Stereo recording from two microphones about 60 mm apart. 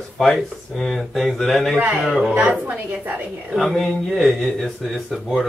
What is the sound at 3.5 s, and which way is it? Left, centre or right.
Speech, centre.